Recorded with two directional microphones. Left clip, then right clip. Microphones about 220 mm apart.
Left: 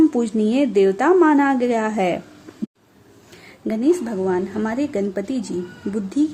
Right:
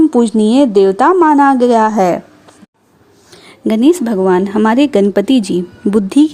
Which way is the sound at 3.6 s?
40° right (ahead or behind).